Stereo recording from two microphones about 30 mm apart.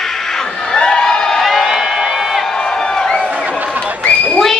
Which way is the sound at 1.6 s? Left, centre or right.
Centre.